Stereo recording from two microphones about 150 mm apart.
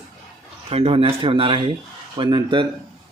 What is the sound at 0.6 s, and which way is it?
Speech, 40° right (ahead or behind).